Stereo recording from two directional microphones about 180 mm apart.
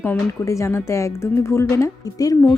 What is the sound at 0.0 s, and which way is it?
Speech, 15° left (ahead or behind).